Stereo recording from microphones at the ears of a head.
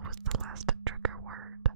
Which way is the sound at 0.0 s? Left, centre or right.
Right.